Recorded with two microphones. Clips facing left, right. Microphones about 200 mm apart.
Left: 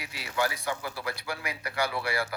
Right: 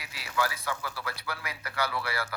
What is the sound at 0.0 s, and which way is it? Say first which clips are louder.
A man's voice: left 1 dB; 25° left (ahead or behind).